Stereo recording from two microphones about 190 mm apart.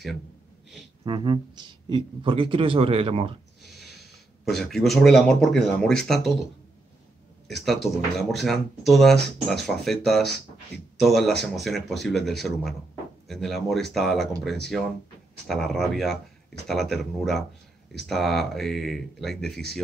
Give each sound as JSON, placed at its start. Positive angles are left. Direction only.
{"t": 1.0, "sound": "speech", "side_deg": -25}
{"t": 4.5, "sound": "speech", "side_deg": 0}
{"t": 7.4, "sound": "speech", "side_deg": 0}
{"t": 15.4, "sound": "speech", "side_deg": 0}